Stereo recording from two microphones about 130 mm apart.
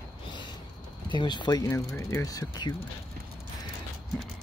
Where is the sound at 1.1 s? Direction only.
35° left (ahead or behind).